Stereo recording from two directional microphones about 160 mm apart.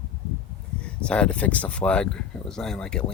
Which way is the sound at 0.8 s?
5° left (ahead or behind).